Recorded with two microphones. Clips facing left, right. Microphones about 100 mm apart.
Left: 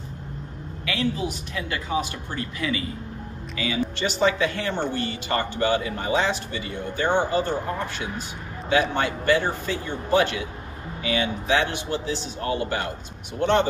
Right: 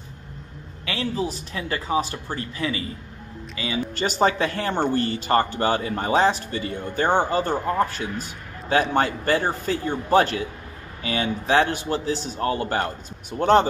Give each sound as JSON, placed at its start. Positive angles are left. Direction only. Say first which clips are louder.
{"t": 0.8, "sound": "speech", "louder": "even", "side_deg": -35}
{"t": 4.0, "sound": "speech", "louder": "right 2 dB", "side_deg": -40}
{"t": 8.2, "sound": "a sound", "louder": "left 1 dB", "side_deg": -40}
{"t": 8.9, "sound": "speech", "louder": "right 1 dB", "side_deg": -40}